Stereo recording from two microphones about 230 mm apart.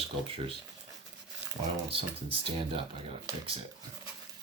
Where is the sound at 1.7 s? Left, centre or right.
Right.